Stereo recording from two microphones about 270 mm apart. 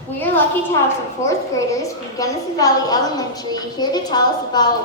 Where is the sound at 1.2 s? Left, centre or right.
Centre.